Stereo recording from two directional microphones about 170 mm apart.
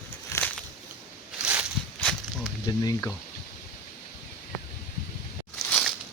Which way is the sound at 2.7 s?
20° left (ahead or behind).